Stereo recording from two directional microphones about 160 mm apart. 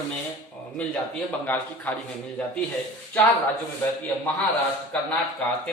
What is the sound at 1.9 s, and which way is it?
Speech, 10° left (ahead or behind).